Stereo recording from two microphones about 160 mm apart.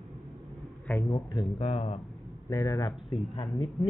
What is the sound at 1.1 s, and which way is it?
Speech, 30° left (ahead or behind).